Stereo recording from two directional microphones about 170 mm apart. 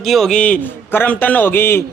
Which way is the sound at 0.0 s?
Centre (ahead or behind).